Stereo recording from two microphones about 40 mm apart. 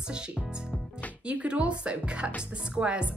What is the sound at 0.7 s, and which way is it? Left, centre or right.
Music, left.